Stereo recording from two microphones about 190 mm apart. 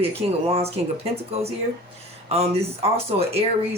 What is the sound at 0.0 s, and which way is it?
Speech, 30° right (ahead or behind).